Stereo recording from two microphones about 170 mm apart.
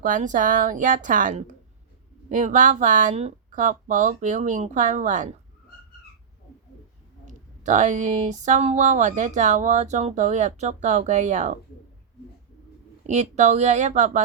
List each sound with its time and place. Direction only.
0.0 s speech: 50° right (ahead or behind)
7.3 s speech: 45° right (ahead or behind)
13.1 s speech: 45° right (ahead or behind)